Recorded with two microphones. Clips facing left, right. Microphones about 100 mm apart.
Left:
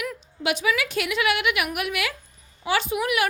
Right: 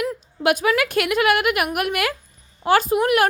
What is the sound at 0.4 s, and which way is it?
A woman's voice, 50° right (ahead or behind).